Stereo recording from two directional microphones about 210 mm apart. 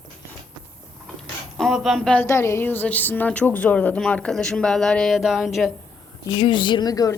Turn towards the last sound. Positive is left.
turn(degrees=15)  # may be behind; listen again after turning